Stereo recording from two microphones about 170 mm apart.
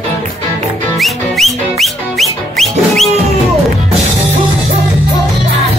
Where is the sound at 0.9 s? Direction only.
Centre (ahead or behind).